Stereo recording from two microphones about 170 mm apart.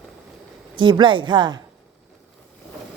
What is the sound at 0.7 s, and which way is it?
Speech, 30° right (ahead or behind).